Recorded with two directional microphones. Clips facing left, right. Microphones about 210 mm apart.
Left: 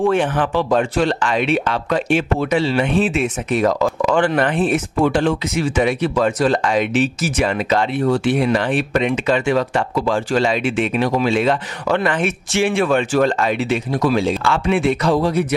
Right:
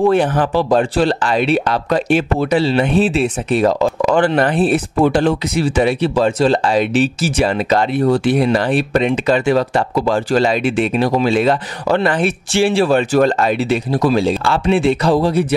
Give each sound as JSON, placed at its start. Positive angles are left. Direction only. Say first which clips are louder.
{"t": 0.0, "sound": "speech", "louder": "right 3 dB", "side_deg": -35}